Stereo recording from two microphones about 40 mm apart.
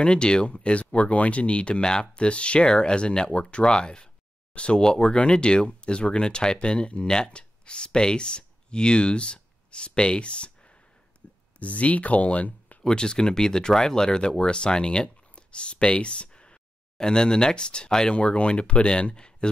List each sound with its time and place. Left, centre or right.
0.0 s speech: left
2.2 s speech: left
4.8 s speech: centre; by 12.7 s left
12.8 s speech: centre